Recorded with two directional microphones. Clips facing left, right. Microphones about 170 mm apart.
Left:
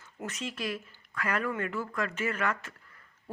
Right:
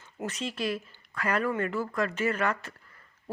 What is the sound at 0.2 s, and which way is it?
A woman's voice, 30° right (ahead or behind).